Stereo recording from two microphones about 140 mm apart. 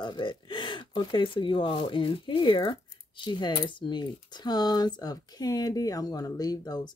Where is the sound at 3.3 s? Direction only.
30° left (ahead or behind).